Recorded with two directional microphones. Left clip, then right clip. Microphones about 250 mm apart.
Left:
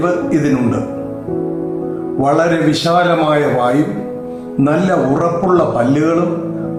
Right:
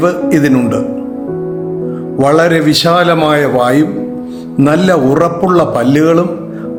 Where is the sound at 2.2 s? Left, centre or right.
Right.